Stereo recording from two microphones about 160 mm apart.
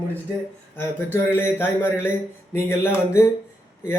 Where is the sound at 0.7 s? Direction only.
15° left (ahead or behind).